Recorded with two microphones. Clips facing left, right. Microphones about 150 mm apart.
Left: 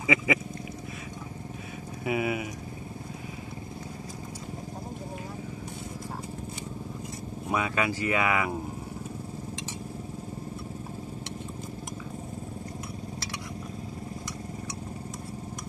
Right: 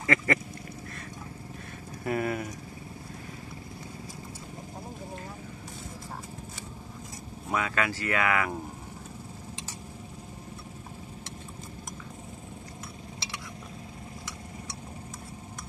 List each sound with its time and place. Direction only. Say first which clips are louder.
0.0 s speech: left 1 dB; 5° left (ahead or behind)
2.0 s speech: left 1 dB; 5° left (ahead or behind)
7.4 s speech: left 1 dB; 15° left (ahead or behind)